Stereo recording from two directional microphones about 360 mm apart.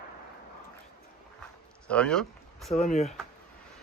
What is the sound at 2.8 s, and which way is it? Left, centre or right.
Speech, centre.